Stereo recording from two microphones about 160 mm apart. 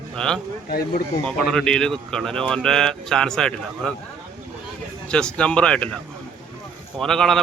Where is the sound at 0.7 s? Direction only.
70° left (ahead or behind).